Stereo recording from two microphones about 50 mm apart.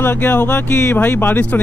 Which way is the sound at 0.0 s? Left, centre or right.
Left.